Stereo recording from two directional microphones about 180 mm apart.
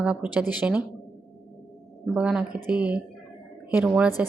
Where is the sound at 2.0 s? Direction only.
5° right (ahead or behind).